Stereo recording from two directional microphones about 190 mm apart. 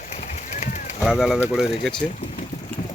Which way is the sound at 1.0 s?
Centre (ahead or behind).